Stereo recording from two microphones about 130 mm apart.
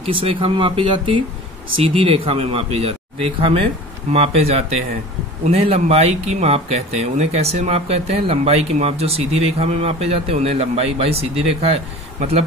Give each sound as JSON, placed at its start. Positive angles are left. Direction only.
{"t": 0.0, "sound": "speech", "side_deg": -45}